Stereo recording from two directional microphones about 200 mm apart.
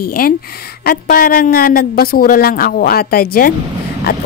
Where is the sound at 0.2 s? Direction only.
45° left (ahead or behind).